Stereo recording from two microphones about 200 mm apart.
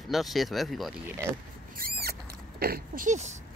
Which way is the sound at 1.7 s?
50° right (ahead or behind).